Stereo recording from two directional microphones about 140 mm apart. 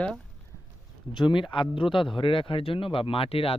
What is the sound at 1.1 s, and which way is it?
Speech, 35° left (ahead or behind).